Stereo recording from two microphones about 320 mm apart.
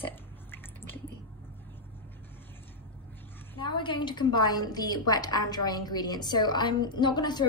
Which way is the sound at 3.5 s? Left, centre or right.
Centre.